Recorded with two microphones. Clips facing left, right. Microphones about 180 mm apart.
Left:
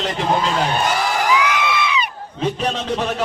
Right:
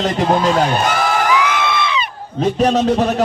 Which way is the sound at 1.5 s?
15° left (ahead or behind).